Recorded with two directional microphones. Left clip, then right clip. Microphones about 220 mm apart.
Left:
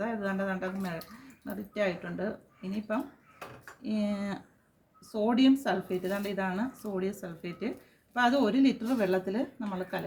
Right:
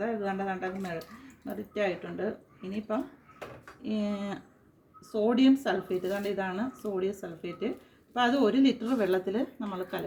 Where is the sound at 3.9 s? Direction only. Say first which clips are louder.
Even; 15° left (ahead or behind).